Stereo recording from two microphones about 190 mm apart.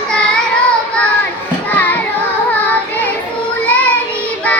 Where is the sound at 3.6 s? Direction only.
10° left (ahead or behind).